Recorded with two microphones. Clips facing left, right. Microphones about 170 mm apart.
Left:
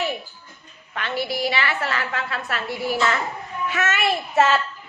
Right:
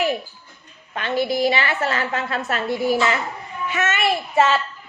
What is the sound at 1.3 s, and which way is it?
A woman's voice, 20° right (ahead or behind).